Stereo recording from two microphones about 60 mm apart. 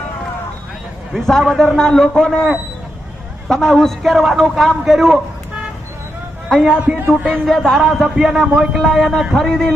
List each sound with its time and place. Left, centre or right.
1.1 s a man's voice: centre
3.5 s a man's voice: centre
6.5 s a man's voice: centre
6.7 s speech: centre
7.4 s a man's voice: centre